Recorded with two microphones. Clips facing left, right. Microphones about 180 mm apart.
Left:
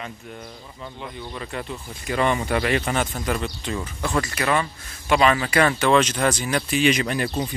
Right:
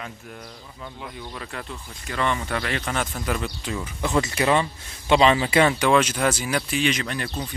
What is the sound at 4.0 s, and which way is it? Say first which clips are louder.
Speech: right 3 dB; 20° right (ahead or behind).